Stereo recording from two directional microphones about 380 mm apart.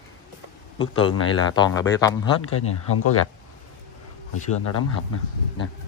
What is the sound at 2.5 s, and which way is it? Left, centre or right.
Speech, left.